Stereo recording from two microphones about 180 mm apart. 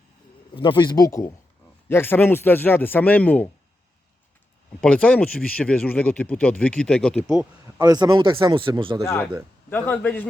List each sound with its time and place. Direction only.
0.5 s speech: 25° left (ahead or behind); by 3.5 s 10° left (ahead or behind)
4.8 s speech: 5° left (ahead or behind)
7.8 s a man's voice: 20° right (ahead or behind)
9.6 s speech: 10° left (ahead or behind)